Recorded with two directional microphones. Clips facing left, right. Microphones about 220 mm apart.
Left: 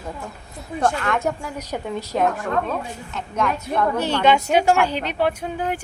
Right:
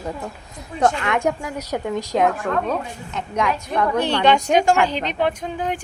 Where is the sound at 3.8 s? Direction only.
5° left (ahead or behind).